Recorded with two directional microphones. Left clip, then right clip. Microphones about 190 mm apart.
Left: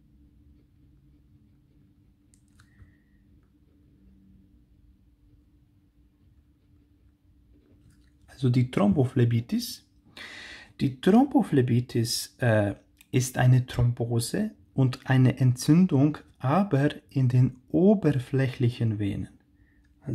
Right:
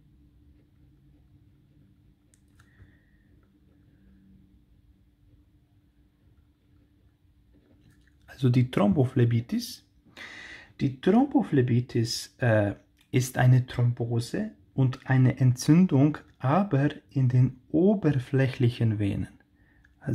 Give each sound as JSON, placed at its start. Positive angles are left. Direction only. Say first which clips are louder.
{"t": 8.3, "sound": "speech", "louder": "right 1 dB", "side_deg": -10}